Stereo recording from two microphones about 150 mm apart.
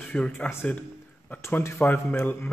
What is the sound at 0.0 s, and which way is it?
A man's voice, 5° left (ahead or behind).